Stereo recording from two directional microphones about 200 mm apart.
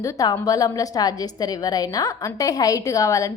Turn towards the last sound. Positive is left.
turn(degrees=15)  # may be behind; listen again after turning